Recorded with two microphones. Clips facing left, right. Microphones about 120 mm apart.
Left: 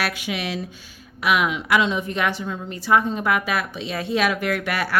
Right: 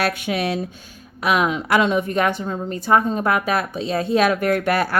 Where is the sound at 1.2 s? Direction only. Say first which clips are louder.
Right 2 dB; 40° right (ahead or behind).